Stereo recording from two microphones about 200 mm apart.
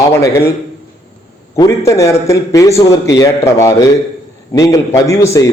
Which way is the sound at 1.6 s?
15° left (ahead or behind).